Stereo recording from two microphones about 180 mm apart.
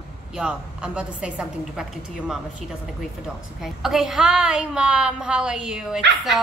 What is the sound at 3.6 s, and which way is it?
A woman's voice, centre (ahead or behind).